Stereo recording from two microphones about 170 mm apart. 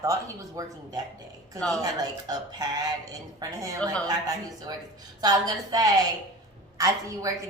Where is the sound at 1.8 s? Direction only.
20° right (ahead or behind).